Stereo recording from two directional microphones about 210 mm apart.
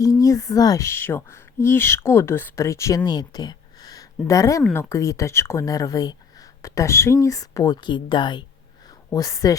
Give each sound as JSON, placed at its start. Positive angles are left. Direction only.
{"t": 0.0, "sound": "speech", "side_deg": 15}